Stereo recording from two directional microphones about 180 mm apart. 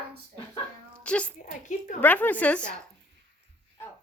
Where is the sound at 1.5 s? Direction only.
45° left (ahead or behind).